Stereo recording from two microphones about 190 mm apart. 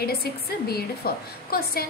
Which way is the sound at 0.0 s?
55° left (ahead or behind).